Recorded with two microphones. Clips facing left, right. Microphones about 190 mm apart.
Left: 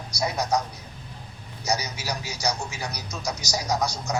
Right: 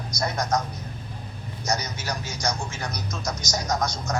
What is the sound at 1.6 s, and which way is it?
Speech, 10° left (ahead or behind).